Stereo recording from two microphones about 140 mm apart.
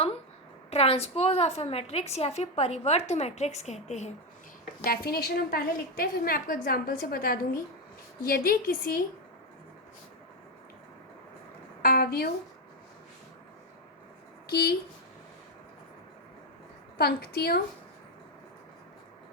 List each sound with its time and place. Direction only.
0.7 s a woman's voice: 45° left (ahead or behind)
4.8 s a woman's voice: 90° left
11.8 s a woman's voice: 90° left
17.0 s a woman's voice: 90° left